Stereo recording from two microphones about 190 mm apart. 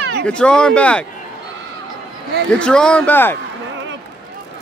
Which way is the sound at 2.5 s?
5° left (ahead or behind).